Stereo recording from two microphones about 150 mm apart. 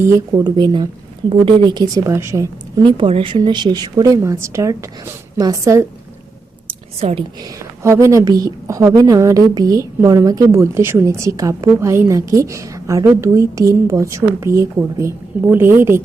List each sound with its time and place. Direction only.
0.0 s a woman's voice: 20° right (ahead or behind)
6.7 s a sound: 40° right (ahead or behind)
7.8 s a woman's voice: 20° right (ahead or behind)